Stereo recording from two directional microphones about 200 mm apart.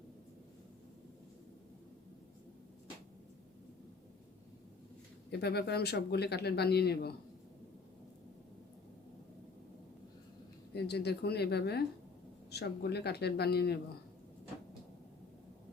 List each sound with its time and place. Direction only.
5.3 s speech: 55° left (ahead or behind)
10.8 s speech: 55° left (ahead or behind)